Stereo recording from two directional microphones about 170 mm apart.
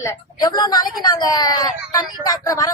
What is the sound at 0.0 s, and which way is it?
Speech, 20° left (ahead or behind).